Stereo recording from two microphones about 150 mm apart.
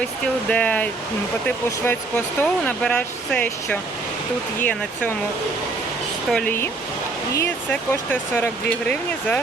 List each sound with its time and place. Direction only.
0.5 s speech: 10° left (ahead or behind)
6.3 s speech: 10° left (ahead or behind)